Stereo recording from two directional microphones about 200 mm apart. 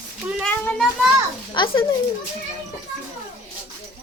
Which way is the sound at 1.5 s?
25° left (ahead or behind).